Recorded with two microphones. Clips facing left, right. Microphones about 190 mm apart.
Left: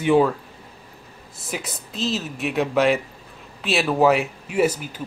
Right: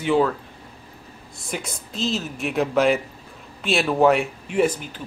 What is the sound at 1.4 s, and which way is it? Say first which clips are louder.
Speech: even; centre (ahead or behind).